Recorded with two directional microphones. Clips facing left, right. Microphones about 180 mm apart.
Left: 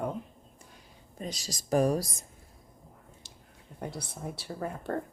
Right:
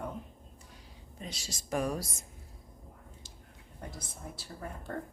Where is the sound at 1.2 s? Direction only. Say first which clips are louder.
Left 5 dB; 40° left (ahead or behind).